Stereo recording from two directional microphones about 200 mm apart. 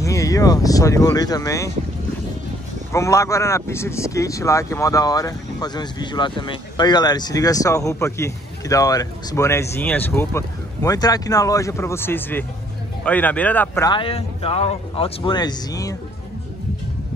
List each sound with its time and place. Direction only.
0.0 s speech: 15° left (ahead or behind)
2.9 s speech: 15° left (ahead or behind)
13.8 s speech: 25° left (ahead or behind)